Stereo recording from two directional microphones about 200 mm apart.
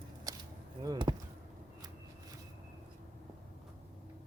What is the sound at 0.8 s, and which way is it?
Basketball bounce, 20° right (ahead or behind).